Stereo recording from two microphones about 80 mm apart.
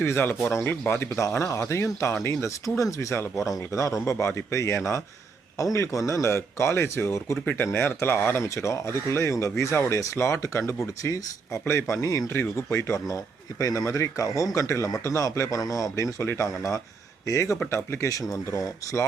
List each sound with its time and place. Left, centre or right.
0.0 s speech: left
7.4 s speech: left
13.6 s speech: left